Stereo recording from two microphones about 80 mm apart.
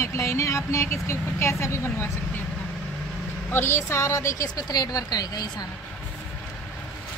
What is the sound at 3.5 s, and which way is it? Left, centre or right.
Speech, left.